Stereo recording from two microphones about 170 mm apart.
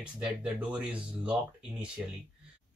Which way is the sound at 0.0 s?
5° right (ahead or behind).